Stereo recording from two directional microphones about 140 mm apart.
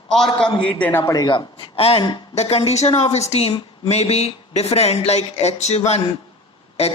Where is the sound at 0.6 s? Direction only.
10° left (ahead or behind).